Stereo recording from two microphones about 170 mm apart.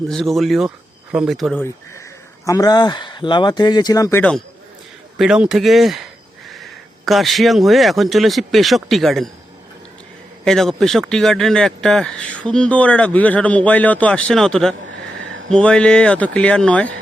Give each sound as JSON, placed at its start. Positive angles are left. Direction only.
{"t": 0.1, "sound": "speech", "side_deg": 0}
{"t": 2.5, "sound": "speech", "side_deg": 20}
{"t": 4.2, "sound": "speech", "side_deg": 5}
{"t": 10.4, "sound": "speech", "side_deg": 0}